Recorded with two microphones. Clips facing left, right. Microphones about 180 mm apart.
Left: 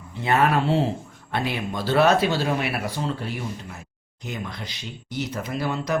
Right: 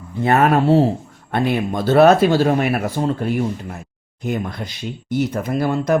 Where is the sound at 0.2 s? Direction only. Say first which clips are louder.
Right 6 dB; 50° right (ahead or behind).